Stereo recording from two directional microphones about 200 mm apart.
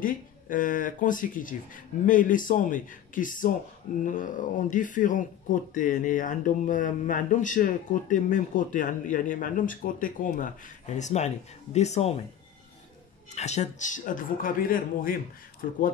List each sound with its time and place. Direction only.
0.0 s speech: 45° left (ahead or behind)
13.3 s speech: 35° left (ahead or behind)